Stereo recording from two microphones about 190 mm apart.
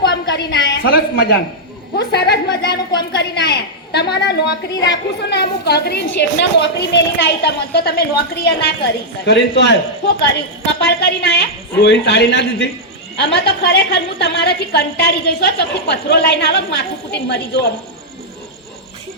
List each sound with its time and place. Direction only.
0.0 s a woman's voice: 60° left (ahead or behind)
9.2 s a woman's voice: 65° left (ahead or behind)